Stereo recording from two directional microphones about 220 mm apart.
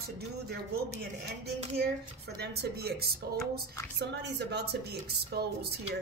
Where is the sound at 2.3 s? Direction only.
45° right (ahead or behind).